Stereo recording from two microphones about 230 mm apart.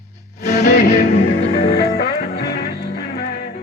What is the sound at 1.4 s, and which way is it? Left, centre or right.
Music, left.